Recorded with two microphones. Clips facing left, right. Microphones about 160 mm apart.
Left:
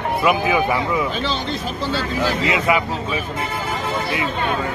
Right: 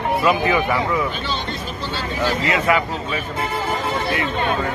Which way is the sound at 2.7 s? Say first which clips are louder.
Right 1 dB; 15° left (ahead or behind).